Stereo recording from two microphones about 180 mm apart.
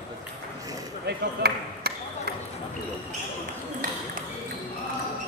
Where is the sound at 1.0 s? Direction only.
60° right (ahead or behind).